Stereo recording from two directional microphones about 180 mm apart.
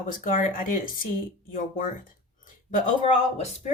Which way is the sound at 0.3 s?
45° left (ahead or behind).